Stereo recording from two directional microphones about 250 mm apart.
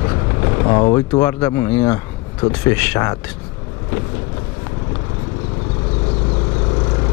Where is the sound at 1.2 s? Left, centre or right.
Centre.